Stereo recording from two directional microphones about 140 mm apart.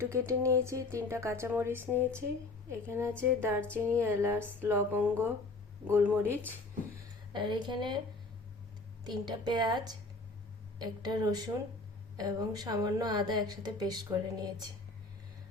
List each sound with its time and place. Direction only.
0.0 s a woman's voice: 20° right (ahead or behind)
7.3 s a woman's voice: 35° right (ahead or behind)
9.0 s a woman's voice: 30° right (ahead or behind)